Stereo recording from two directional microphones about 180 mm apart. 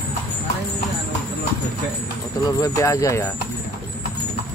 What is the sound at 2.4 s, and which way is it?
Speech, 20° left (ahead or behind).